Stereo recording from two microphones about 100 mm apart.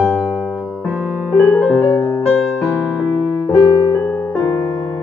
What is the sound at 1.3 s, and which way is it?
Piano, 10° left (ahead or behind).